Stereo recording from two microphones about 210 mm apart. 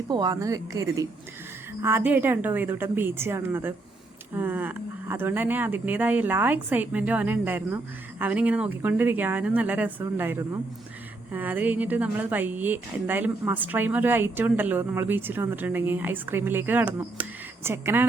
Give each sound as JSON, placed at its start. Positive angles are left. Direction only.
{"t": 0.1, "sound": "a woman's voice", "side_deg": -20}